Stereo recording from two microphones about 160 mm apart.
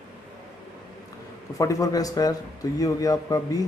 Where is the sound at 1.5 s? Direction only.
20° left (ahead or behind).